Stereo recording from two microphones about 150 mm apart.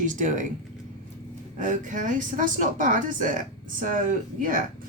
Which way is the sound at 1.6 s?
60° right (ahead or behind).